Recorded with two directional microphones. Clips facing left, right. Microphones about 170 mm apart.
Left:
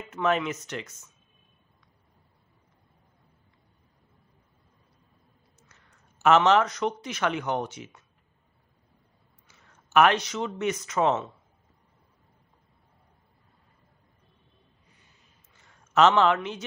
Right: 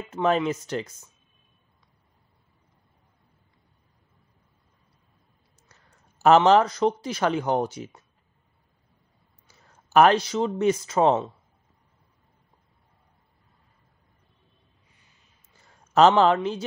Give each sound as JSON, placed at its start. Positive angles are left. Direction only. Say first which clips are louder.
{"t": 0.1, "sound": "speech", "louder": "right 3 dB", "side_deg": -30}
{"t": 5.7, "sound": "speech", "louder": "right 1 dB", "side_deg": -35}
{"t": 9.5, "sound": "speech", "louder": "right 3 dB", "side_deg": -35}
{"t": 15.5, "sound": "a sound", "louder": "right 3 dB", "side_deg": -35}